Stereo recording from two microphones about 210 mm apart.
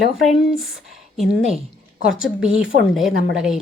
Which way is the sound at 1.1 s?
Centre (ahead or behind).